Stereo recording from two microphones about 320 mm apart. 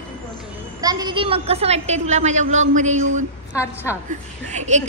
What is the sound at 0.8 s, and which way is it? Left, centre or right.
A woman's voice, centre.